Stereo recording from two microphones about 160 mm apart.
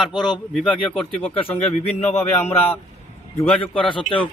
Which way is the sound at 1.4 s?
40° left (ahead or behind).